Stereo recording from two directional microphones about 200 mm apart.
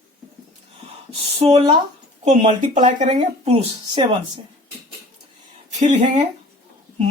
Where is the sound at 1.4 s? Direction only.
30° right (ahead or behind).